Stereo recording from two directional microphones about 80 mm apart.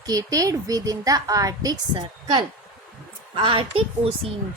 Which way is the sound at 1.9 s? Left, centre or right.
Right.